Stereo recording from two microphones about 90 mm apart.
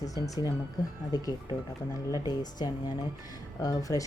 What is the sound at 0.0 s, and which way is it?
A woman's voice, 40° left (ahead or behind).